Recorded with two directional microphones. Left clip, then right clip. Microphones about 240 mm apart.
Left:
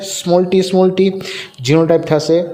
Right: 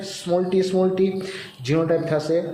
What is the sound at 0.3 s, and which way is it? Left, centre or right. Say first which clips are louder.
A man's voice: left 8 dB; left.